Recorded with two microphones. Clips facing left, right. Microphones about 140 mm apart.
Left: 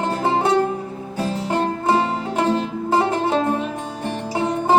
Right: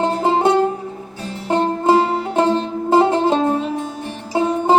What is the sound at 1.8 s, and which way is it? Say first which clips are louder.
Music: right 6 dB; 25° right (ahead or behind).